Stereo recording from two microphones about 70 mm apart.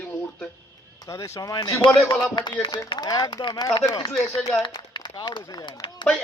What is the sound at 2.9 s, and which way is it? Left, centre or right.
Speech, left.